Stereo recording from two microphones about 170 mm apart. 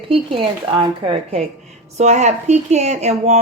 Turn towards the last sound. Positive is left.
turn(degrees=-40)  # may be behind; listen again after turning